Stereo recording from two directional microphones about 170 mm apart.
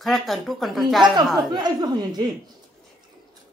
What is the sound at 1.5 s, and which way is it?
Speech, 25° right (ahead or behind).